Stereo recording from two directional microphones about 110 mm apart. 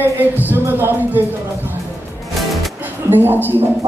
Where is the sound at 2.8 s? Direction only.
20° right (ahead or behind).